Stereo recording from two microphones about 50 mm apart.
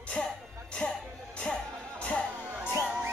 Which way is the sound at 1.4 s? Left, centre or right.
Centre.